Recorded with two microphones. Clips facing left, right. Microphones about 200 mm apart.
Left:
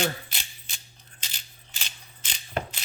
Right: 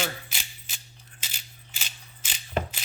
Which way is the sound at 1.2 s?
5° right (ahead or behind).